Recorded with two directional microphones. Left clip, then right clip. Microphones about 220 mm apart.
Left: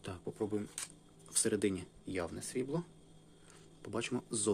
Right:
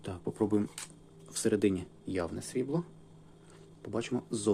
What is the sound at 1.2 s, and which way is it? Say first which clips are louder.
Speech: right 5 dB; centre (ahead or behind).